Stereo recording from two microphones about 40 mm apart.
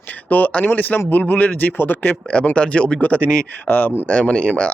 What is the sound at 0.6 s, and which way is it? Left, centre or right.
Speech, left.